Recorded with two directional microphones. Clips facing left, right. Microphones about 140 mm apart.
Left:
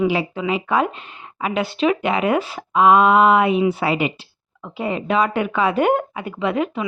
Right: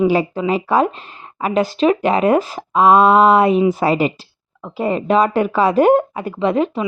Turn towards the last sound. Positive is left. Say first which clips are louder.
# right 4 dB
turn(degrees=-35)  # may be behind; listen again after turning